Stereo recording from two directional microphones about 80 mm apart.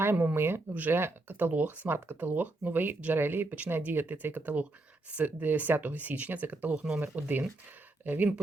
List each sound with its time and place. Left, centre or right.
0.0 s speech: right